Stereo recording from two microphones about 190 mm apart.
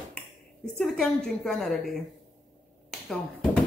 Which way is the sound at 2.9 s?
5° left (ahead or behind).